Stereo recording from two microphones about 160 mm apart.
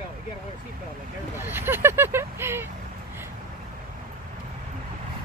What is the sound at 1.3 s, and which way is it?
Speech, 15° right (ahead or behind).